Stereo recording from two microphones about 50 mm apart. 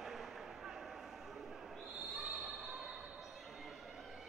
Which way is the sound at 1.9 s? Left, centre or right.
Centre.